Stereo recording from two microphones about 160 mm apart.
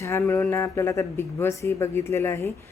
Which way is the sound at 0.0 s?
15° left (ahead or behind).